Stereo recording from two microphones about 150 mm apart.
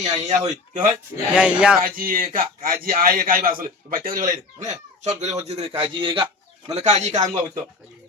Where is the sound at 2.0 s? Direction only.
70° right (ahead or behind); by 6.2 s 35° right (ahead or behind).